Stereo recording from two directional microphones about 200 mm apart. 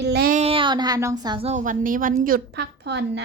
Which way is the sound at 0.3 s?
30° right (ahead or behind).